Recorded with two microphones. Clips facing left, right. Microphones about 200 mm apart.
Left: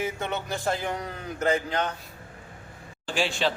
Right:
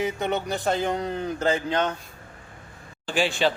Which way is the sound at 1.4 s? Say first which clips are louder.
Even; 30° right (ahead or behind).